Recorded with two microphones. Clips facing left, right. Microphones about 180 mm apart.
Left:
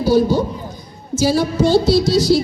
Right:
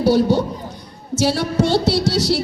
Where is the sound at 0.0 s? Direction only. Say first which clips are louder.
Left 1 dB; 70° right (ahead or behind).